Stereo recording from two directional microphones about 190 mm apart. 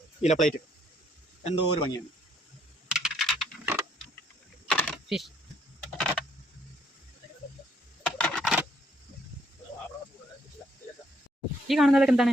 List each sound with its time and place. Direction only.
0.2 s speech: 40° left (ahead or behind)
1.5 s speech: 25° left (ahead or behind)
2.9 s computer keyboard: centre (ahead or behind)
8.0 s a sound: centre (ahead or behind)
11.7 s speech: centre (ahead or behind)